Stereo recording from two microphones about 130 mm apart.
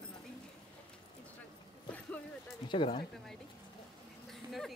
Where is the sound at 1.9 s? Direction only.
10° left (ahead or behind).